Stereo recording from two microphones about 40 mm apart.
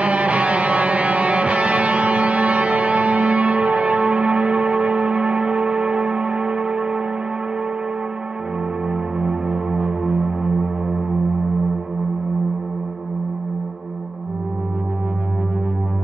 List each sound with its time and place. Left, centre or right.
0.0 s music: right
9.2 s music: right